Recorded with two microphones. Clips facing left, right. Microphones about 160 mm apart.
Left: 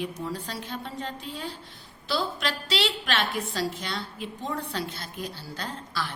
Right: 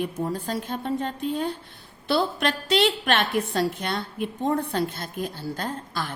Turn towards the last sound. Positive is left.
turn(degrees=-50)  # may be behind; listen again after turning